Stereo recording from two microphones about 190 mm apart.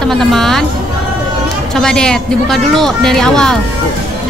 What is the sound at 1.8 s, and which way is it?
Speech, 5° left (ahead or behind).